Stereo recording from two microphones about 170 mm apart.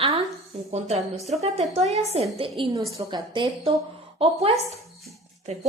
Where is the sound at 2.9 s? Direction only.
25° right (ahead or behind).